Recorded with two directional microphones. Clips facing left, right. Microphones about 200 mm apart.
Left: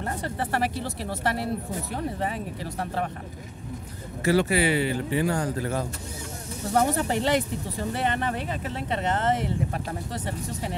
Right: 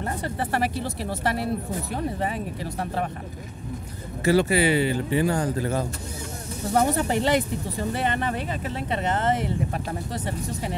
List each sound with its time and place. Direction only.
0.0 s speech: 10° right (ahead or behind)
4.2 s speech: 25° right (ahead or behind)
6.7 s speech: 15° right (ahead or behind)